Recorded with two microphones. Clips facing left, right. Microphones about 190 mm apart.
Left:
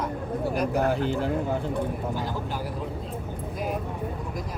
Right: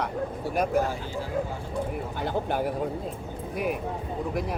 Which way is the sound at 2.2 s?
60° right (ahead or behind).